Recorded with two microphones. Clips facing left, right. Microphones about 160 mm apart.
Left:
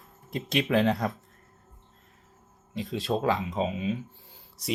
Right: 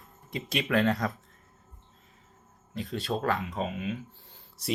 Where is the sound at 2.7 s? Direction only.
Centre (ahead or behind).